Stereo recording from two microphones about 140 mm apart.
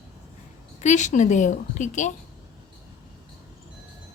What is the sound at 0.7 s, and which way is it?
A woman's voice, 60° left (ahead or behind).